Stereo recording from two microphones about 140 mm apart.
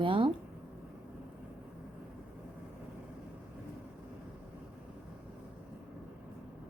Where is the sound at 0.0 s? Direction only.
40° right (ahead or behind).